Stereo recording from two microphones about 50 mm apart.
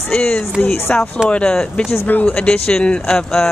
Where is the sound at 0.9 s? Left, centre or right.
Left.